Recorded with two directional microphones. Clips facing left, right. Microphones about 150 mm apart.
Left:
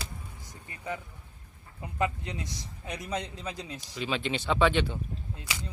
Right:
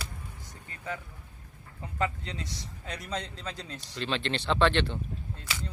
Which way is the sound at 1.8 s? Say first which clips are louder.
Left 1 dB; 15° left (ahead or behind).